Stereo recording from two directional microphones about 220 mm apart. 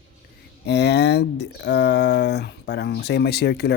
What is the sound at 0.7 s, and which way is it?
Speech, 50° left (ahead or behind).